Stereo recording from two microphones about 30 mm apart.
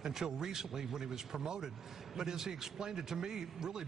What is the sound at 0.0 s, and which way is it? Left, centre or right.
A man's voice, centre.